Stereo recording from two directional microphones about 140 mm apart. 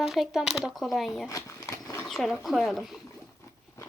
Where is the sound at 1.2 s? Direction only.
25° left (ahead or behind).